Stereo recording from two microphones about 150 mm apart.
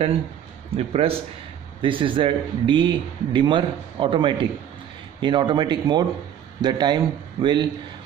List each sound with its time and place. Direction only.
0.7 s a man's voice: 40° right (ahead or behind)